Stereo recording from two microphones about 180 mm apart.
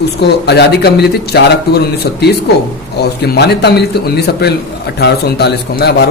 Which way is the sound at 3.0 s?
65° left (ahead or behind).